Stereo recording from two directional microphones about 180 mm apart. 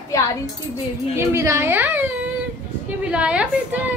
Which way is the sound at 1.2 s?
15° right (ahead or behind).